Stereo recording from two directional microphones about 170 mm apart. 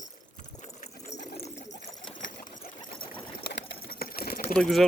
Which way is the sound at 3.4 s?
70° left (ahead or behind).